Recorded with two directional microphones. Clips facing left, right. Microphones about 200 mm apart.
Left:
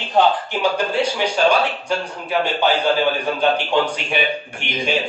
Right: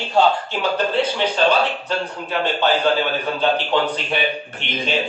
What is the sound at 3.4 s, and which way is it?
A man's voice, 15° left (ahead or behind).